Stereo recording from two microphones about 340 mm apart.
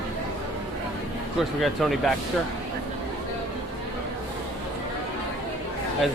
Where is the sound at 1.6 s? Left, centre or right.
Centre.